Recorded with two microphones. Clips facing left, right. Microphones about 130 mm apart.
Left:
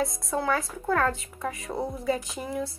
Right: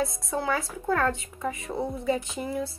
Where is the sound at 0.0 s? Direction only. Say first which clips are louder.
Left 1 dB; centre (ahead or behind).